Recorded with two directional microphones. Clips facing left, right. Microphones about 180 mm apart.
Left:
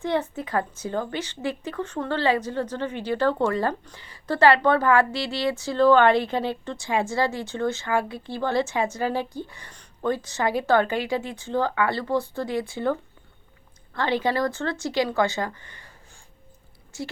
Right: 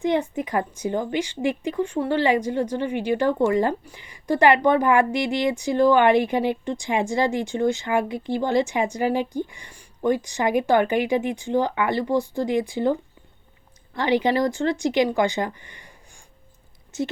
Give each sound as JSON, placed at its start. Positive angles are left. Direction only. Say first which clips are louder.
{"t": 0.0, "sound": "a woman's voice", "louder": "right 3 dB", "side_deg": -15}